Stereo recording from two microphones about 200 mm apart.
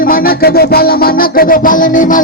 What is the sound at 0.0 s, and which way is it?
Music, 45° left (ahead or behind).